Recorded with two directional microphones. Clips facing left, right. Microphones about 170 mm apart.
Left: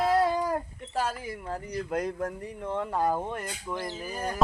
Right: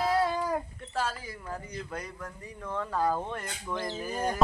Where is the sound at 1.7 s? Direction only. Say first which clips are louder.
Left 8 dB; 45° left (ahead or behind).